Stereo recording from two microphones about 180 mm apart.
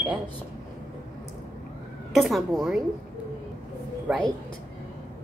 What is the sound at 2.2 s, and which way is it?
Speech, centre (ahead or behind).